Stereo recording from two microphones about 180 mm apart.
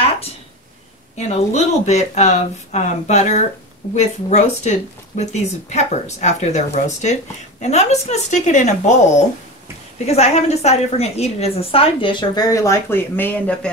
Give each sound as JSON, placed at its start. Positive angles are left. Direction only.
{"t": 1.1, "sound": "a woman's voice", "side_deg": 40}
{"t": 10.0, "sound": "a woman's voice", "side_deg": 35}